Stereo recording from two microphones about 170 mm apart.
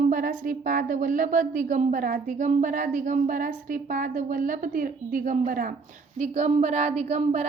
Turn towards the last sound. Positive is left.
turn(degrees=-40)  # may be behind; listen again after turning